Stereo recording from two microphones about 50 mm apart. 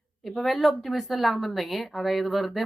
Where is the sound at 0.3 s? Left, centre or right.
Centre.